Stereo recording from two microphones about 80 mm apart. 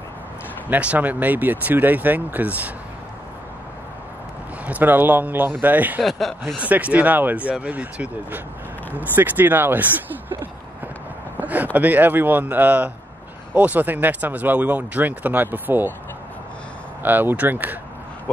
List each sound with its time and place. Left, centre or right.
0.7 s speech: centre
4.6 s speech: right
6.0 s speech: centre
6.6 s speech: centre
11.3 s speech: right
17.0 s speech: right